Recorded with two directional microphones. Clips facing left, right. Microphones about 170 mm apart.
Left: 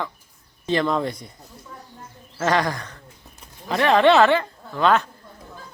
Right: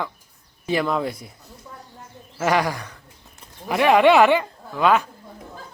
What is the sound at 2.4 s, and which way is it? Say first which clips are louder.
Speech: right 1 dB; 10° right (ahead or behind).